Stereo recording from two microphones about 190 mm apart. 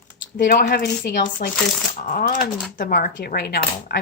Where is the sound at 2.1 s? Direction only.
50° left (ahead or behind).